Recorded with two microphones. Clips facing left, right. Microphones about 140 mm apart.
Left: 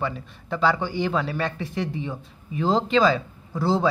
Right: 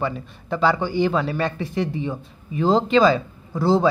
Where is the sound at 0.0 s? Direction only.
5° right (ahead or behind).